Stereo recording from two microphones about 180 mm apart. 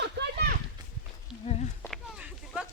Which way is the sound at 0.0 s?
70° right (ahead or behind).